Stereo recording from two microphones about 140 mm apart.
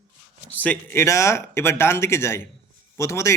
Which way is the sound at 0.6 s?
15° left (ahead or behind).